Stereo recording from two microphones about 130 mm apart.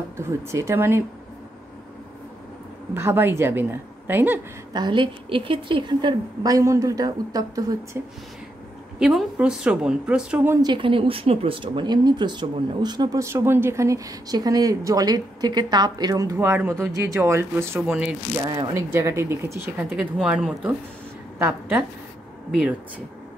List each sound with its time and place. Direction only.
0.2 s speech: 20° right (ahead or behind)
2.9 s speech: 15° right (ahead or behind)
4.7 s a woman's voice: 35° right (ahead or behind)
9.0 s speech: 5° right (ahead or behind)
10.6 s speech: 40° right (ahead or behind); by 18.1 s 10° right (ahead or behind)
18.4 s a woman's voice: 30° right (ahead or behind)
18.9 s speech: 20° right (ahead or behind)
20.0 s speech: 5° right (ahead or behind)